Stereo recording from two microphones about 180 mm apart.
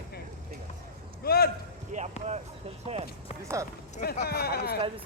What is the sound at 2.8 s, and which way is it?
Speech, 35° right (ahead or behind).